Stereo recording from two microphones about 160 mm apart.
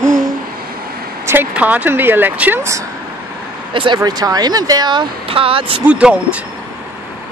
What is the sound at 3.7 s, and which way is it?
Speech, 30° right (ahead or behind).